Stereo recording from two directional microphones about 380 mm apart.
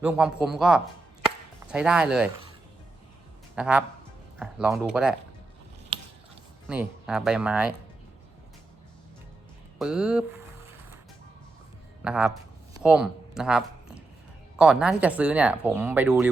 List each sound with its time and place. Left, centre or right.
0.0 s speech: centre
3.5 s speech: centre
6.7 s speech: centre
9.7 s speech: centre
12.0 s speech: centre
12.7 s a sound: centre
14.6 s speech: centre